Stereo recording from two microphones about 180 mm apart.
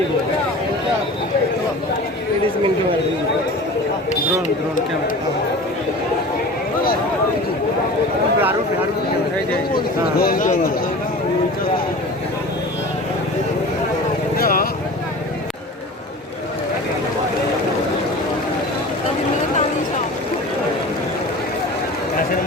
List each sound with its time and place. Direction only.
10.2 s speech: 55° left (ahead or behind)
14.3 s vehicle: 55° left (ahead or behind)